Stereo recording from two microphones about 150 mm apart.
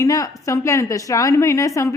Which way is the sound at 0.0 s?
20° left (ahead or behind).